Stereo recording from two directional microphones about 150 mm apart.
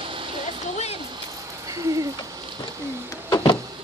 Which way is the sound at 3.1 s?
25° left (ahead or behind).